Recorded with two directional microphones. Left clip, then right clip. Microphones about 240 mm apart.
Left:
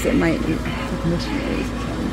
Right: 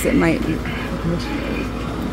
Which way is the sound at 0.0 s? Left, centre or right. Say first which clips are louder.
Right 2 dB; centre.